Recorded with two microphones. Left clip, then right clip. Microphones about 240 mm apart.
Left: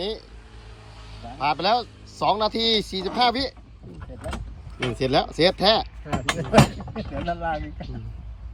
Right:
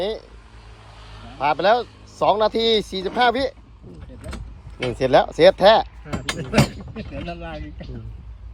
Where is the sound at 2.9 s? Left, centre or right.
Centre.